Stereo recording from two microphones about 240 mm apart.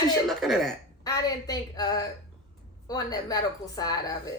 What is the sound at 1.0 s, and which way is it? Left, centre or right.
A woman's voice, centre.